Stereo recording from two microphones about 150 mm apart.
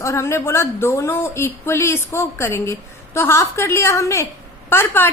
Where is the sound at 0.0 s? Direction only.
20° left (ahead or behind).